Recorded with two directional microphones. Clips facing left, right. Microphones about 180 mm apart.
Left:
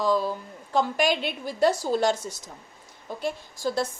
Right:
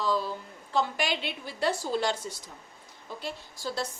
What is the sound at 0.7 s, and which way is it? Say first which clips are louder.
A woman's voice: left 5 dB; 45° left (ahead or behind).